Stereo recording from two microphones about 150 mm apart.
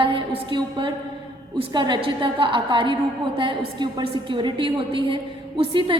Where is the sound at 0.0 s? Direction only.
35° right (ahead or behind).